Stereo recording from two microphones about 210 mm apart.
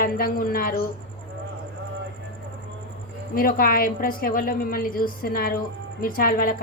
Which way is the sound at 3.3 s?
45° left (ahead or behind).